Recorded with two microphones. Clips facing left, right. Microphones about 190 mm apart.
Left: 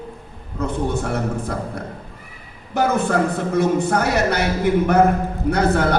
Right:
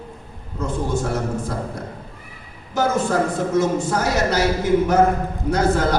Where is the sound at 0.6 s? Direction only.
60° left (ahead or behind).